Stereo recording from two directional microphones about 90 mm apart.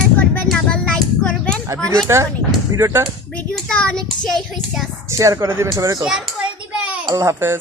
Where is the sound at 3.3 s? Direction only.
10° left (ahead or behind).